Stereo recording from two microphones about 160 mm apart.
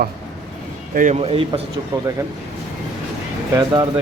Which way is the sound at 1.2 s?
35° right (ahead or behind).